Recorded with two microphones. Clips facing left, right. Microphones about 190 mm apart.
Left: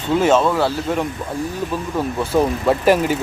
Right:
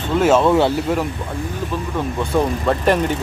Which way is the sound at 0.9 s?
10° right (ahead or behind).